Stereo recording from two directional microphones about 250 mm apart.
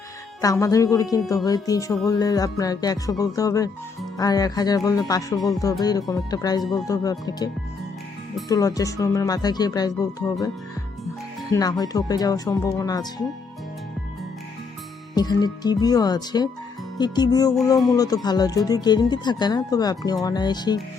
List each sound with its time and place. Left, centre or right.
0.4 s speech: centre
11.5 s speech: centre
15.1 s speech: centre